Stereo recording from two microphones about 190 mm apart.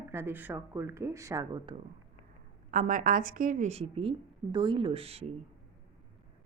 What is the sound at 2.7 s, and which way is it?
Speech, 45° right (ahead or behind).